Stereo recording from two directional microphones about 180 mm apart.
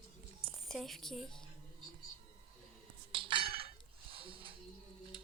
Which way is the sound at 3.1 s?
30° right (ahead or behind).